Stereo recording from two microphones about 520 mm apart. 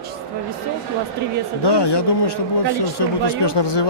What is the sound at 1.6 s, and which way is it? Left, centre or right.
Speech, left.